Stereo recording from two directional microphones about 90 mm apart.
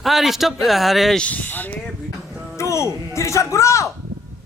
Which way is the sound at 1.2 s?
15° left (ahead or behind).